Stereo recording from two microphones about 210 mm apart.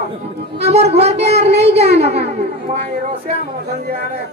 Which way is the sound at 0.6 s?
30° right (ahead or behind).